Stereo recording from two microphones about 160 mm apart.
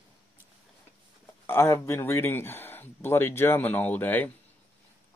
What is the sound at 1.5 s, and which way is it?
Speech, 15° left (ahead or behind).